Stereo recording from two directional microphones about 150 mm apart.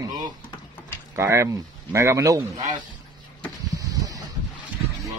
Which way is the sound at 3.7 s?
25° right (ahead or behind).